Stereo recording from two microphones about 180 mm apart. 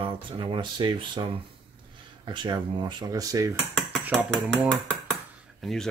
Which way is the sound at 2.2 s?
25° right (ahead or behind).